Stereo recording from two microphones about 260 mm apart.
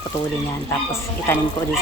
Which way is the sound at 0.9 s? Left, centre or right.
Centre.